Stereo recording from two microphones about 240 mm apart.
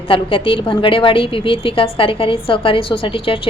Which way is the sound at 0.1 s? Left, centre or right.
Left.